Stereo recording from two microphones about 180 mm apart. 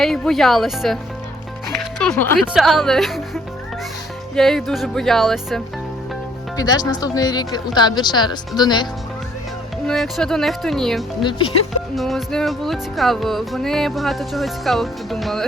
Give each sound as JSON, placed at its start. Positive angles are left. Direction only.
{"t": 0.0, "sound": "music", "side_deg": 0}
{"t": 6.6, "sound": "speech", "side_deg": 20}
{"t": 9.8, "sound": "music", "side_deg": 0}
{"t": 11.2, "sound": "speech", "side_deg": 25}
{"t": 11.9, "sound": "music", "side_deg": 0}